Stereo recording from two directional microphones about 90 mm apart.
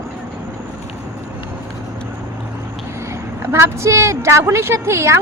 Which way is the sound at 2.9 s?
35° right (ahead or behind).